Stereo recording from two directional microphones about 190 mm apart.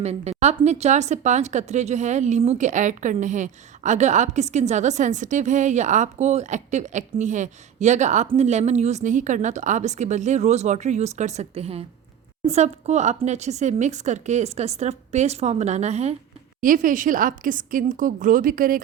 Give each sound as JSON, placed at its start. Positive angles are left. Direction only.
{"t": 0.0, "sound": "a woman's voice", "side_deg": -35}